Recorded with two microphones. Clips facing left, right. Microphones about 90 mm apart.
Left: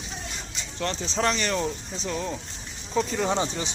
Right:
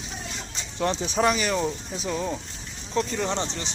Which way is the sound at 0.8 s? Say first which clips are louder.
Right 4 dB; 15° right (ahead or behind).